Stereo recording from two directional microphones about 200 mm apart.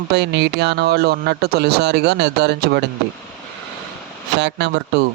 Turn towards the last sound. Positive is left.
turn(degrees=-60)  # may be behind; listen again after turning